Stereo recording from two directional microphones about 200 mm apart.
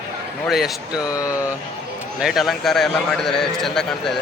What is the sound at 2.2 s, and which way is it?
A man's voice, centre (ahead or behind).